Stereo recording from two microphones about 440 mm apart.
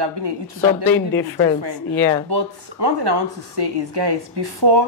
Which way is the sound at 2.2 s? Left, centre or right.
Right.